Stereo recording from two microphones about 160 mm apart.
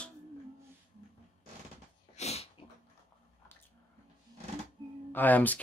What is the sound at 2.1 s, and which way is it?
Dog, 40° left (ahead or behind).